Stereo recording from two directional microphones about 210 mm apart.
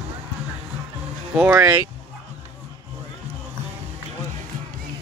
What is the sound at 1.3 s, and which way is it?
Speech, 10° right (ahead or behind).